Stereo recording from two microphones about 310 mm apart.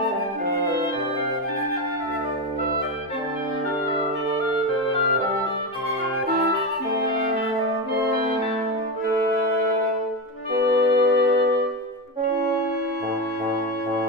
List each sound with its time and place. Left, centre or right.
10.5 s music: right